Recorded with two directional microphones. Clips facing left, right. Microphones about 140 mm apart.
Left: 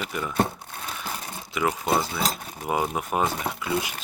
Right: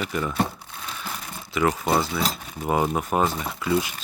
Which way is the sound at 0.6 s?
50° left (ahead or behind).